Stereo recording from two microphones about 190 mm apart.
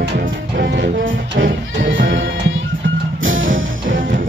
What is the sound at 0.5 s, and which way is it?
Music, 65° right (ahead or behind).